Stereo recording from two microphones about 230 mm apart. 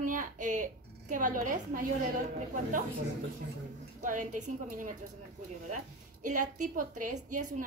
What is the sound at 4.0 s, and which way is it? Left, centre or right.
Speech, right.